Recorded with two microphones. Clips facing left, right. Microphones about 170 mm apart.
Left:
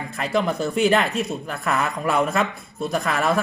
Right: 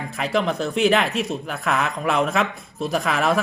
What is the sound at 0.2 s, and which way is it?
Speech, centre (ahead or behind).